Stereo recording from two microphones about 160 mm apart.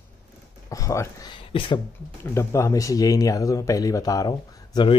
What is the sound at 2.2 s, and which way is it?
Speech, 15° left (ahead or behind).